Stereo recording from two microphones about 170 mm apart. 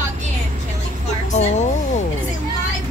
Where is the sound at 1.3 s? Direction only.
40° left (ahead or behind).